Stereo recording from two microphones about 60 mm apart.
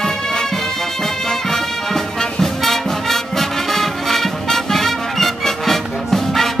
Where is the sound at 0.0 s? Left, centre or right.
Centre.